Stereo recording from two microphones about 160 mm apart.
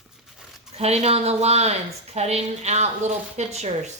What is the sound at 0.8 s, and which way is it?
A woman's voice, 40° right (ahead or behind).